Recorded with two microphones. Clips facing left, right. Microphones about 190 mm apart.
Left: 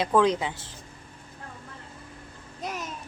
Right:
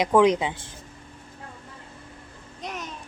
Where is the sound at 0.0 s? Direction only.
15° right (ahead or behind).